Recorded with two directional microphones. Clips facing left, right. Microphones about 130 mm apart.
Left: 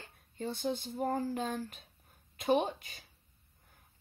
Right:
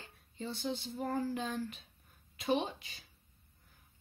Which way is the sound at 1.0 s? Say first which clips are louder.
Left 2 dB; 40° left (ahead or behind).